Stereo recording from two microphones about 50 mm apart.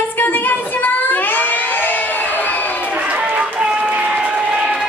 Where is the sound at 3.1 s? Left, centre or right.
Right.